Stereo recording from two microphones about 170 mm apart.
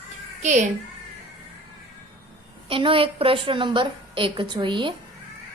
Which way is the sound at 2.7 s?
30° right (ahead or behind).